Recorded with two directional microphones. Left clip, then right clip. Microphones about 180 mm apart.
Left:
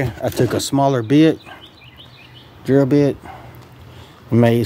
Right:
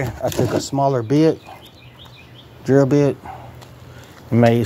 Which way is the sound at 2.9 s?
30° left (ahead or behind).